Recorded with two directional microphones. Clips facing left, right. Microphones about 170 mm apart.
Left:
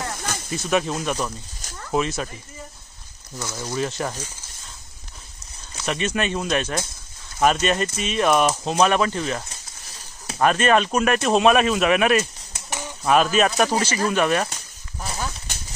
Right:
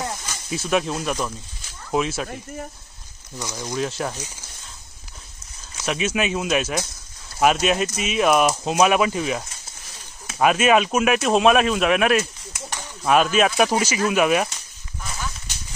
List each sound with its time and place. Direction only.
0.5 s speech: centre (ahead or behind)
3.3 s speech: 15° right (ahead or behind)
3.7 s speech: centre (ahead or behind)
5.9 s speech: 5° right (ahead or behind)
10.4 s speech: 5° right (ahead or behind)
12.6 s a sound: 15° left (ahead or behind)
13.0 s speech: centre (ahead or behind)
15.0 s a sound: 35° left (ahead or behind)